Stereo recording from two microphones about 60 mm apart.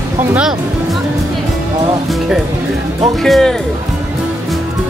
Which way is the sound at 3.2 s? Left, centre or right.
Centre.